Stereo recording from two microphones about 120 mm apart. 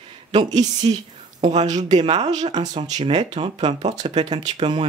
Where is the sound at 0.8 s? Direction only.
55° right (ahead or behind).